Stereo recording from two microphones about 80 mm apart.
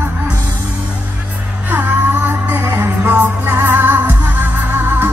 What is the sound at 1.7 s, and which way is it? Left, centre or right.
Music, right.